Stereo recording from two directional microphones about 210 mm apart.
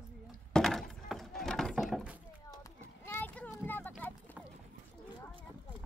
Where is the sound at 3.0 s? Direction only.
10° left (ahead or behind).